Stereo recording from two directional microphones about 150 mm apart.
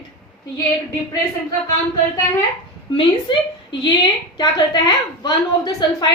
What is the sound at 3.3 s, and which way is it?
A woman's voice, 35° left (ahead or behind).